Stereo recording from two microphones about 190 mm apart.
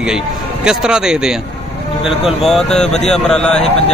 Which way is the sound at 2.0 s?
30° left (ahead or behind).